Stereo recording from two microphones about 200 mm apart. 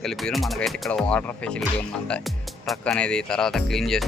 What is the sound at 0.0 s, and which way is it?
Speech, centre (ahead or behind).